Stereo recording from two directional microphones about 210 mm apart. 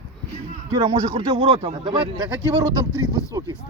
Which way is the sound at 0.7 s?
25° right (ahead or behind).